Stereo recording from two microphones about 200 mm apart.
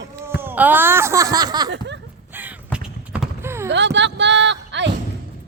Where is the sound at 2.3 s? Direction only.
10° right (ahead or behind).